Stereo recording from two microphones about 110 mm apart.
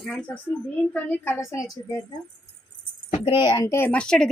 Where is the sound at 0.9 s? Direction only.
15° left (ahead or behind).